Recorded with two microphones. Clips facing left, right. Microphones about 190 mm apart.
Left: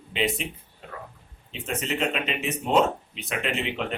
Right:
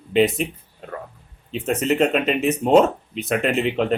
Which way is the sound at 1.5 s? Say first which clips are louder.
Right 9 dB; 45° right (ahead or behind).